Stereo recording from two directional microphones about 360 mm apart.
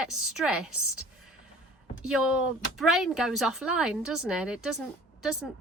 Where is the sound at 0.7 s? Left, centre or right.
Left.